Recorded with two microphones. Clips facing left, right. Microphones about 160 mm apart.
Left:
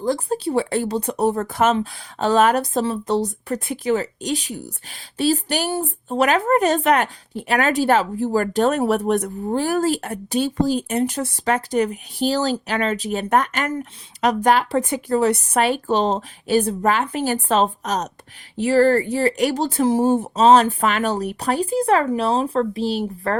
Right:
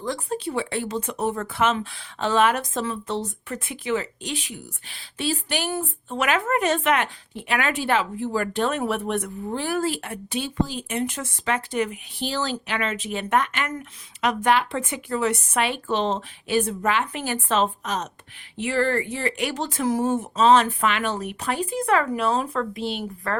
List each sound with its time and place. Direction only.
0.0 s speech: 35° left (ahead or behind)